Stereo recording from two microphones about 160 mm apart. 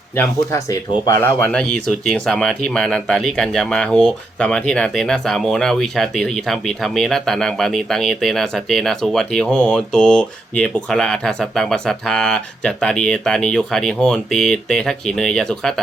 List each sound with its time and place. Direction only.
0.2 s speech: 20° left (ahead or behind)
1.4 s speech: 5° left (ahead or behind)